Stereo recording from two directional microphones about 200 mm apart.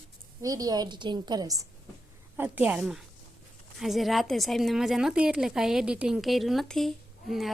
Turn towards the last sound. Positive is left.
turn(degrees=0)  # may be behind; listen again after turning